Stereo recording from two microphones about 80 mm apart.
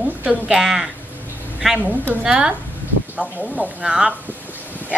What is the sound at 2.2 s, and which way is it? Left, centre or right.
Speech, centre.